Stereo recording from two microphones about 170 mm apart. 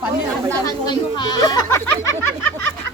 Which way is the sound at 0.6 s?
25° left (ahead or behind).